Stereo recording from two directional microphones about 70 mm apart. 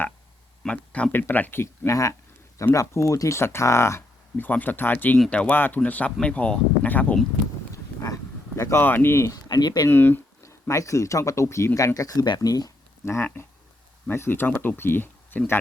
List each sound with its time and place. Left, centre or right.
0.6 s speech: centre
1.1 s speech: left
1.6 s speech: left
4.4 s speech: left
8.0 s a sound: left
8.8 s speech: left
9.3 s speech: left
9.9 s speech: left
10.4 s speech: left
11.9 s speech: left
13.1 s speech: left